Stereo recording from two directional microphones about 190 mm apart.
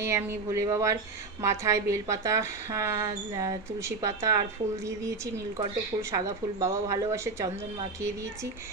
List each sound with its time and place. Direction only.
0.0 s a woman's voice: 15° right (ahead or behind)
5.9 s a woman's voice: 15° right (ahead or behind)